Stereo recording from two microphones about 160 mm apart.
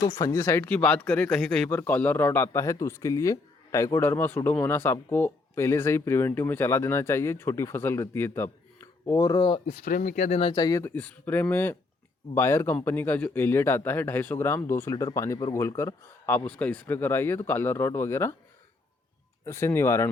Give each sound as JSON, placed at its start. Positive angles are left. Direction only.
{"t": 0.0, "sound": "speech", "side_deg": 20}
{"t": 9.6, "sound": "speech", "side_deg": 50}
{"t": 10.5, "sound": "speech", "side_deg": 25}
{"t": 19.5, "sound": "speech", "side_deg": 15}